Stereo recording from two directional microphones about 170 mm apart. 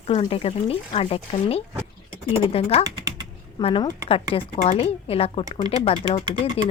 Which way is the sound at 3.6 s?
35° left (ahead or behind).